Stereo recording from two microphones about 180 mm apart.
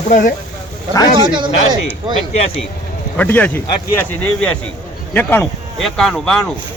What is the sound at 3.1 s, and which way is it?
Speech, 10° left (ahead or behind).